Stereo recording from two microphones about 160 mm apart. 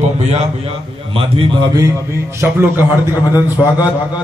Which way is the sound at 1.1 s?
30° right (ahead or behind).